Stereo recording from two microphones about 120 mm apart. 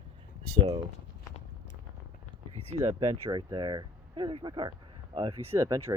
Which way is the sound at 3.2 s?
35° right (ahead or behind).